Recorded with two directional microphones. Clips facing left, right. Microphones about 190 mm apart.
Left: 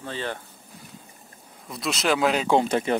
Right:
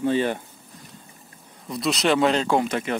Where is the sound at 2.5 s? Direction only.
30° left (ahead or behind).